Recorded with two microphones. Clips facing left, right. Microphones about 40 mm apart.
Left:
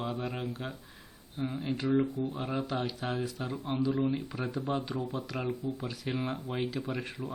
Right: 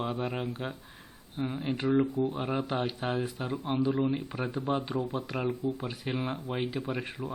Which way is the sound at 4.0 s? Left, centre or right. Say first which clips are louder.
Right 1 dB; centre.